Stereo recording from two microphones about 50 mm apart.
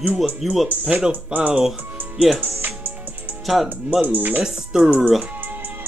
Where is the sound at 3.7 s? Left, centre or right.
Right.